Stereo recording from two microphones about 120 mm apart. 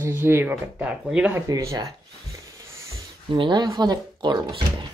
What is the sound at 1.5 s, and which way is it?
Speech, 25° right (ahead or behind).